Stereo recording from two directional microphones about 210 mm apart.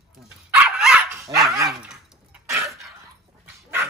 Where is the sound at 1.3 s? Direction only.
15° right (ahead or behind).